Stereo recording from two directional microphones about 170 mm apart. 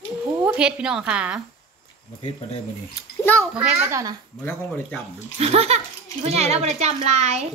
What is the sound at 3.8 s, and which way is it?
Speech, 20° right (ahead or behind).